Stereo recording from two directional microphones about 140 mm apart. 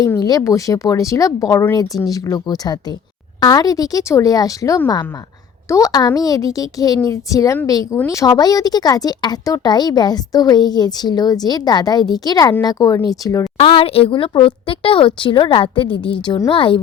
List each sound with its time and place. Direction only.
0.2 s a woman's voice: 25° left (ahead or behind)
13.6 s a woman's voice: 40° left (ahead or behind)